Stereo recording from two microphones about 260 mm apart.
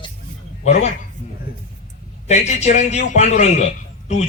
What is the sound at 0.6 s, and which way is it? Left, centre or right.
Speech, left.